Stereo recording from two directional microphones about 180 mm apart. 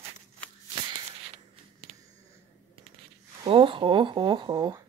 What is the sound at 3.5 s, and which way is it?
Speech, 30° right (ahead or behind).